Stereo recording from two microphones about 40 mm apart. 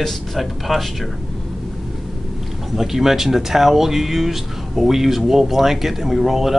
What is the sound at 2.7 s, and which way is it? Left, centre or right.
Speech, centre.